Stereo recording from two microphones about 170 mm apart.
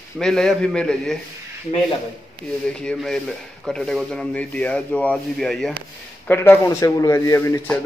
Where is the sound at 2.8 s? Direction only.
5° left (ahead or behind).